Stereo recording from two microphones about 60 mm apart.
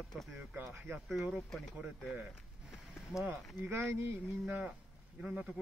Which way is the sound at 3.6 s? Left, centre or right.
Right.